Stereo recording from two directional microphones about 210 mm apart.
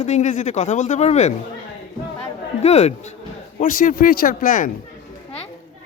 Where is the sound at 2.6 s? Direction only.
30° left (ahead or behind).